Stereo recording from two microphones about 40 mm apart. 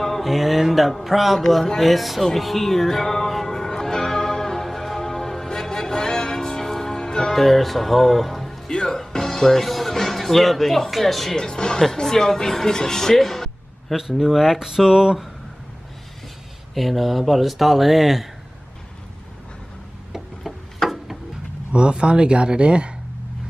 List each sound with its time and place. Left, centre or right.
0.0 s speech: centre
2.2 s music: centre
7.3 s speech: centre
8.7 s music: centre
11.3 s speech: centre
13.9 s speech: centre
16.7 s speech: centre
20.4 s a sound: centre
21.7 s speech: right